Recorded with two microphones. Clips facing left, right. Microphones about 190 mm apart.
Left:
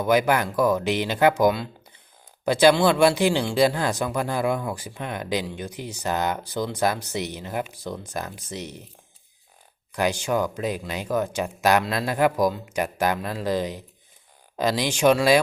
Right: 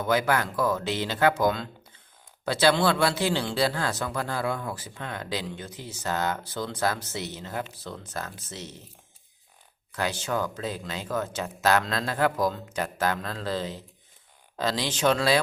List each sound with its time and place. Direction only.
0.0 s speech: 15° left (ahead or behind)
9.9 s speech: 15° left (ahead or behind)